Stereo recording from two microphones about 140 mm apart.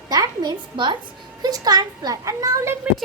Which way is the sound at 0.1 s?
30° right (ahead or behind).